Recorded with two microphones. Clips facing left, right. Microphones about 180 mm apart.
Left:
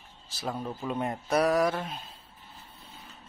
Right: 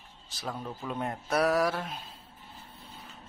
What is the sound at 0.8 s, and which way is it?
Speech, 5° left (ahead or behind).